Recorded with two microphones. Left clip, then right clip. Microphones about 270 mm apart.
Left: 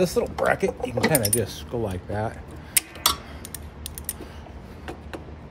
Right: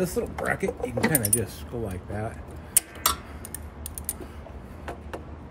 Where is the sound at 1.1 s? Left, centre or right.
Left.